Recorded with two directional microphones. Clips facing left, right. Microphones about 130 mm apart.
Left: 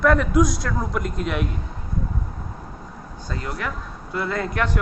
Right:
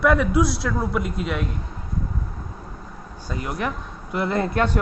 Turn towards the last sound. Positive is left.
turn(degrees=-25)  # may be behind; listen again after turning